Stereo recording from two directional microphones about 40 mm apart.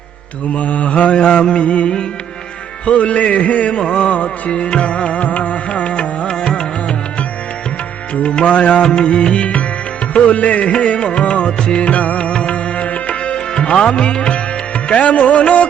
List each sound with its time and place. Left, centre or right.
0.5 s music: left; by 6.9 s centre
8.4 s music: left
13.3 s music: left